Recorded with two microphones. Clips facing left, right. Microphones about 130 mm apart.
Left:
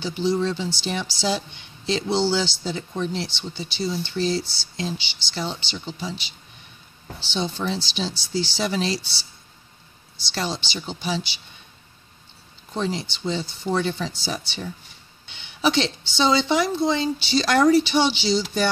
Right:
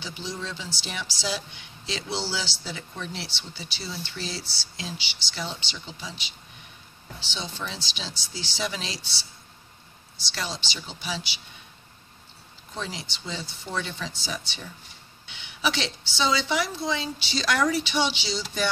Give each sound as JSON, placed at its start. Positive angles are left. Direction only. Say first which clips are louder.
{"t": 0.0, "sound": "speech", "louder": "left 12 dB", "side_deg": 30}
{"t": 10.3, "sound": "speech", "louder": "left 6 dB", "side_deg": 30}
{"t": 12.7, "sound": "speech", "louder": "left 9 dB", "side_deg": 30}